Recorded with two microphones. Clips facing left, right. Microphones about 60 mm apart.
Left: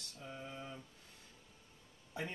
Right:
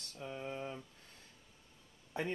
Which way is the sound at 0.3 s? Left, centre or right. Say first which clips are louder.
Right 5 dB; right.